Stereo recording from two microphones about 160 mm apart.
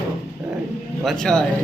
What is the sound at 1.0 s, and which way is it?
Speech, 5° left (ahead or behind).